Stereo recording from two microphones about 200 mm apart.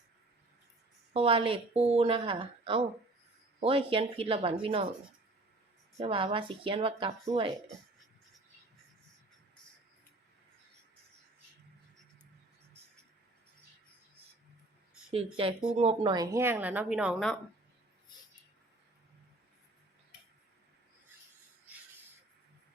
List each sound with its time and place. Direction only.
1.1 s a woman's voice: 30° right (ahead or behind)
6.0 s a woman's voice: 25° right (ahead or behind)
15.1 s a woman's voice: 25° right (ahead or behind)
16.1 s a woman's voice: 15° right (ahead or behind); by 17.3 s centre (ahead or behind)